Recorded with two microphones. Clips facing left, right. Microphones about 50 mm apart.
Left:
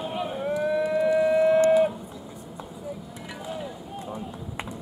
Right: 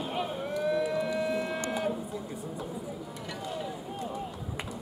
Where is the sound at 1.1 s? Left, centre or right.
Centre.